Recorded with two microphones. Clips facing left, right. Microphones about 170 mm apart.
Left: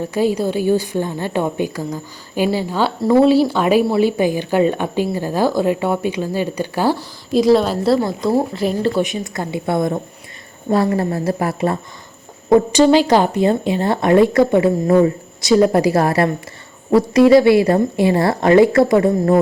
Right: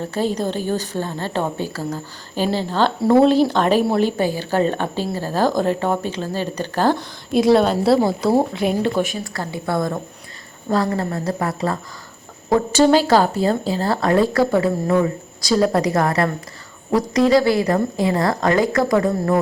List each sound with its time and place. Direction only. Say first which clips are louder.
0.0 s a woman's voice: left 4 dB; 10° left (ahead or behind)
3.0 s a woman's voice: left 2 dB; centre (ahead or behind)
4.2 s a woman's voice: left 3 dB; 15° left (ahead or behind)
7.3 s a woman's voice: left 1 dB; centre (ahead or behind)
9.2 s a woman's voice: left 4 dB; 20° left (ahead or behind)
14.8 s a woman's voice: left 5 dB; 30° left (ahead or behind)